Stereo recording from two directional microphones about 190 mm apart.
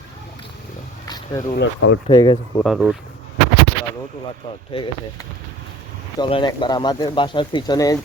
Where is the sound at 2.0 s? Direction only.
25° left (ahead or behind).